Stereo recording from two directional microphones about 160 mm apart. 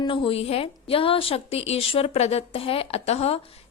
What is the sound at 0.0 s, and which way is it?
A woman's voice, 30° left (ahead or behind).